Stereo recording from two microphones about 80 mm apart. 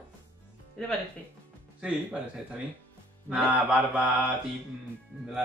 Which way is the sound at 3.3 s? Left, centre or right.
Centre.